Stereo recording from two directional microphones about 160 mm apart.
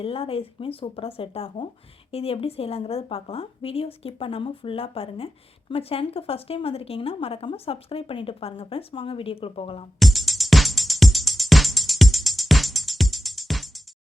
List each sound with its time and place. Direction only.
0.0 s speech: 35° left (ahead or behind)
10.0 s music: centre (ahead or behind)